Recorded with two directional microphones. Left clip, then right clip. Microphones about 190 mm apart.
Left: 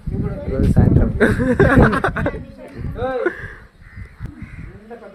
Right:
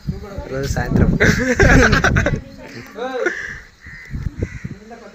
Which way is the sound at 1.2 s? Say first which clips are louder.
Right 1 dB; 35° left (ahead or behind).